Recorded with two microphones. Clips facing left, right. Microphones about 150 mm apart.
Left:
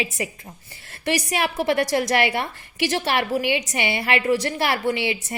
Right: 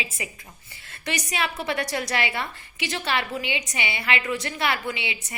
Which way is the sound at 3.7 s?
55° left (ahead or behind).